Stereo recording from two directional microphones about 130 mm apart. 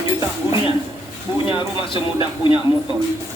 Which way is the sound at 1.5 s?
40° left (ahead or behind).